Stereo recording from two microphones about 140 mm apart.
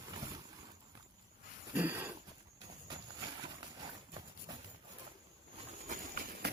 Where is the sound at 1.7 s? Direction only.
10° right (ahead or behind).